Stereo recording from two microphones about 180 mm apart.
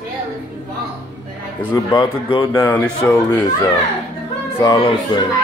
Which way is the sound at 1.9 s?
25° left (ahead or behind).